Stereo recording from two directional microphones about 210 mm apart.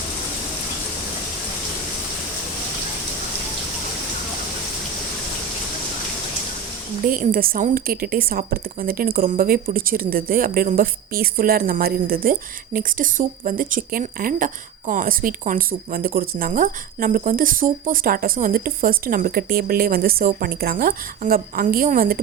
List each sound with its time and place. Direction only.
7.0 s a woman's voice: 40° right (ahead or behind)